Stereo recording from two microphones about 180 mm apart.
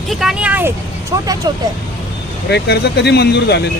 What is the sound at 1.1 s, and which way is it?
Speech, 20° right (ahead or behind).